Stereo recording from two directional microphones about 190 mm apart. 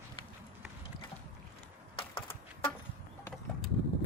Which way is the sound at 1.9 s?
25° left (ahead or behind).